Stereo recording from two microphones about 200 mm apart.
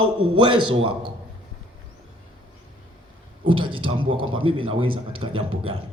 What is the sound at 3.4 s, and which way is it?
A man's voice, 25° right (ahead or behind).